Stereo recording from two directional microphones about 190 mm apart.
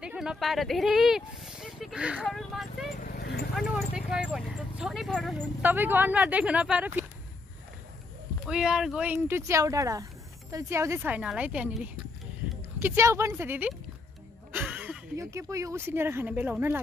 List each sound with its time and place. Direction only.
0.0 s speech: 5° right (ahead or behind)
3.0 s horse: 45° left (ahead or behind)
3.5 s speech: 5° right (ahead or behind)
8.5 s speech: 5° right (ahead or behind)